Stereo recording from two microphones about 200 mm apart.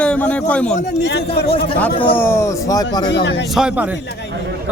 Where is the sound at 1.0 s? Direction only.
55° left (ahead or behind).